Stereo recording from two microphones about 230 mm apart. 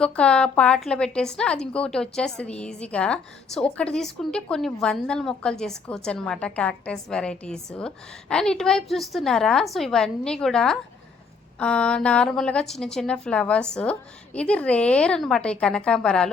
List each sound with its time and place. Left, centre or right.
0.0 s a woman's voice: centre